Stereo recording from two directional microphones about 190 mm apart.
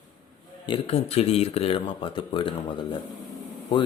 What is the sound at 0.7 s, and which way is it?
Speech, 30° left (ahead or behind).